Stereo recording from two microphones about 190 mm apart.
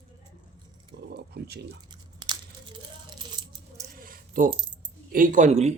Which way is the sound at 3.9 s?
50° right (ahead or behind).